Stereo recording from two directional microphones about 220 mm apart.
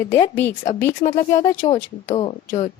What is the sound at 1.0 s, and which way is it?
A woman's voice, 35° left (ahead or behind).